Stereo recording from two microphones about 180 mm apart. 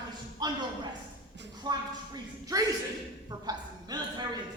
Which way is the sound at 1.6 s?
20° right (ahead or behind).